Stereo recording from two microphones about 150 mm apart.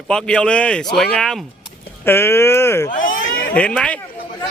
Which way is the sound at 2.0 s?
15° left (ahead or behind).